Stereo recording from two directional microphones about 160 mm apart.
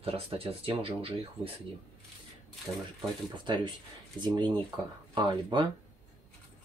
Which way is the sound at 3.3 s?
30° right (ahead or behind).